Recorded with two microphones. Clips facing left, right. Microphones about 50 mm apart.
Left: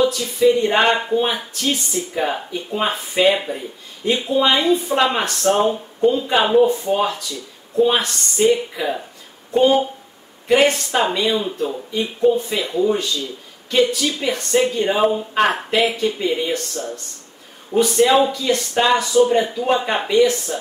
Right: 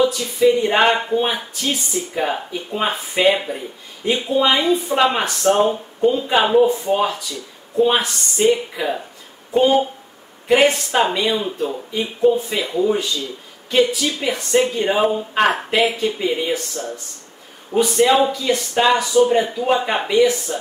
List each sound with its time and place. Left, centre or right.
0.0 s speech: centre
11.0 s speech: centre